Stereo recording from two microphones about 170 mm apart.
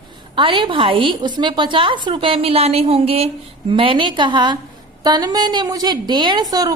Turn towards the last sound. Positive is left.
turn(degrees=-20)  # may be behind; listen again after turning